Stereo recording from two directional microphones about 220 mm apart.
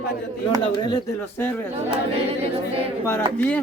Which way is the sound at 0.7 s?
20° left (ahead or behind).